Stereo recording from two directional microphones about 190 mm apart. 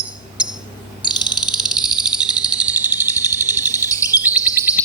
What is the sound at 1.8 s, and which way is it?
Cricket, 5° right (ahead or behind).